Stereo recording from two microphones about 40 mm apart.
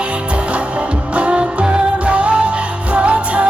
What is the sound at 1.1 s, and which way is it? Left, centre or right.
Music, right.